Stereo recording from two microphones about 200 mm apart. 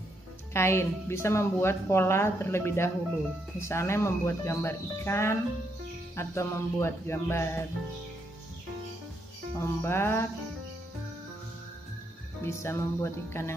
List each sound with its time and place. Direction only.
0.5 s speech: 15° left (ahead or behind)
9.6 s speech: 10° left (ahead or behind)
12.4 s speech: 15° left (ahead or behind)